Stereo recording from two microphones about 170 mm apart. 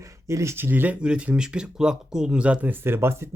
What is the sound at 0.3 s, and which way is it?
Speech, 15° right (ahead or behind).